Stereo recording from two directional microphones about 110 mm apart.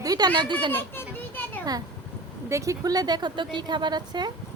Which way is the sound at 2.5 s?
30° right (ahead or behind).